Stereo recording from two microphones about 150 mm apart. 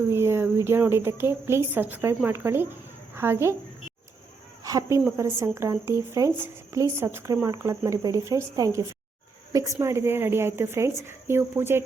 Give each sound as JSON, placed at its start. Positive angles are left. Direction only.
{"t": 0.1, "sound": "speech", "side_deg": -15}
{"t": 4.6, "sound": "a woman's voice", "side_deg": -20}